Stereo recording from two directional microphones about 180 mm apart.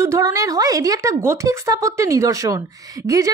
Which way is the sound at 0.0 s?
15° right (ahead or behind).